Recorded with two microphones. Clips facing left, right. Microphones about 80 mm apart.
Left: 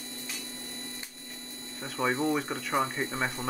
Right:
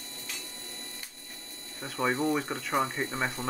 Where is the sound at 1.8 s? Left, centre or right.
Centre.